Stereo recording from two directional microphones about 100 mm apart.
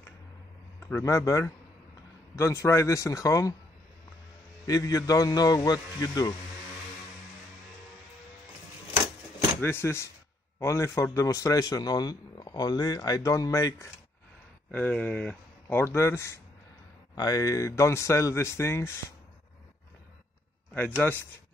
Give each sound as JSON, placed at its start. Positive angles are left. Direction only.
{"t": 0.8, "sound": "a man's voice", "side_deg": 25}
{"t": 4.6, "sound": "a man's voice", "side_deg": 35}
{"t": 9.6, "sound": "a man's voice", "side_deg": 25}
{"t": 14.7, "sound": "speech", "side_deg": 15}
{"t": 20.7, "sound": "speech", "side_deg": 15}